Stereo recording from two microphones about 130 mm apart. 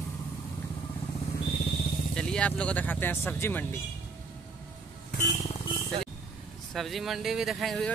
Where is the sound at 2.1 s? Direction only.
5° left (ahead or behind).